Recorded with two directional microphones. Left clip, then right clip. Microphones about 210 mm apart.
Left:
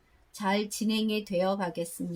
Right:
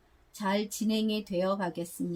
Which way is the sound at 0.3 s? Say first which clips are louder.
Left 2 dB; 20° left (ahead or behind).